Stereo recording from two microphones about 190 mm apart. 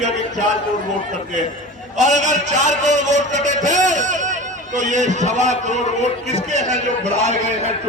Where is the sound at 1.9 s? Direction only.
40° right (ahead or behind).